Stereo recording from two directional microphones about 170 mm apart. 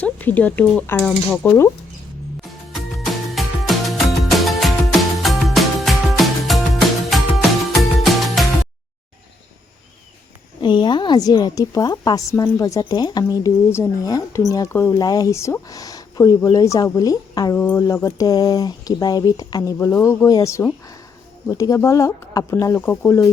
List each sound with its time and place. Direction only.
0.0 s speech: 10° left (ahead or behind)
2.4 s music: centre (ahead or behind)
10.6 s speech: 25° left (ahead or behind)